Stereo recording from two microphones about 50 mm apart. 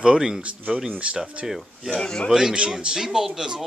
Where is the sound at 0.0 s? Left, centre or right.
Centre.